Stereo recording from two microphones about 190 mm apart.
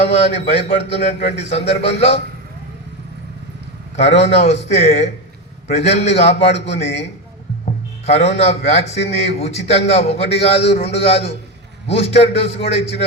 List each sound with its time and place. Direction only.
0.3 s speech: 35° left (ahead or behind)
3.9 s speech: 35° left (ahead or behind)